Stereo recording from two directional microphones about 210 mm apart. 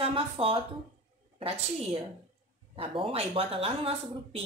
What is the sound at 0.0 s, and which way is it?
Speech, 25° right (ahead or behind).